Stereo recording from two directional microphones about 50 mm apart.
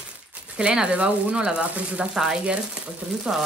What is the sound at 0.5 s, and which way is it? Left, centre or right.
Speech, right.